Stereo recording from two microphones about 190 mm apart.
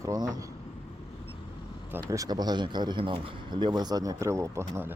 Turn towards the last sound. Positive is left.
turn(degrees=-15)  # may be behind; listen again after turning